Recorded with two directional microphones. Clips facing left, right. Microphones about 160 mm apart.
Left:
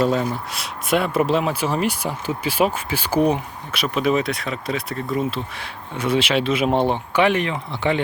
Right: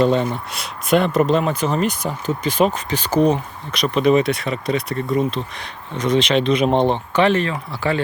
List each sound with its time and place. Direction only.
0.0 s speech: centre (ahead or behind); by 8.0 s 20° left (ahead or behind)